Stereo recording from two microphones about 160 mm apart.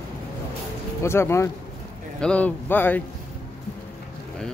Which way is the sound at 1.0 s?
15° left (ahead or behind).